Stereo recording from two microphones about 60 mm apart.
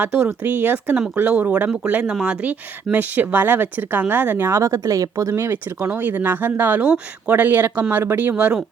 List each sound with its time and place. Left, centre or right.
0.0 s speech: right
4.4 s speech: right
5.3 s speech: right
6.8 s speech: centre
7.3 s speech: right